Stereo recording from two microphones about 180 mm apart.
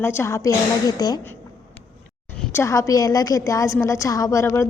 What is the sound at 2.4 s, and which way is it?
A woman's voice, 15° left (ahead or behind).